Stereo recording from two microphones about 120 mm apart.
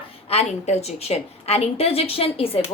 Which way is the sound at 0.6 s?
65° left (ahead or behind).